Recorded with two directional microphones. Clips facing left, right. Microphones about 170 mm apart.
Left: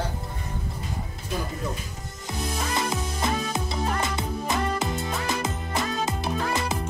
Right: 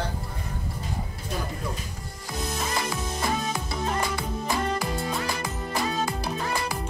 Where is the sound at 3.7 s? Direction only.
20° left (ahead or behind).